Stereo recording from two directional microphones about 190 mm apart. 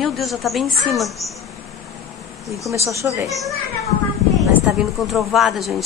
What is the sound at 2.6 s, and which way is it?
Speech, 15° right (ahead or behind).